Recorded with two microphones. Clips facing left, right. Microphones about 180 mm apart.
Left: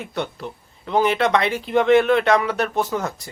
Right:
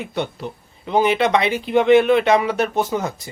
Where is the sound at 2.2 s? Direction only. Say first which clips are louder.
Right 2 dB; 20° right (ahead or behind).